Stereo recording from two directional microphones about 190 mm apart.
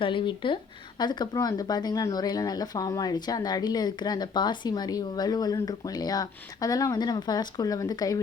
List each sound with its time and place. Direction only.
0.0 s speech: 25° left (ahead or behind)